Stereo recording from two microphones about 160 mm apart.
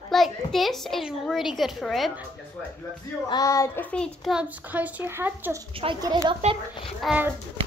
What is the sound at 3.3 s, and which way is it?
Child singing, 20° left (ahead or behind).